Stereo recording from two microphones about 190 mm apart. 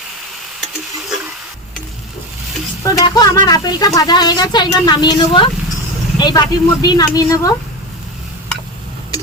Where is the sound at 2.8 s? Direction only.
20° left (ahead or behind).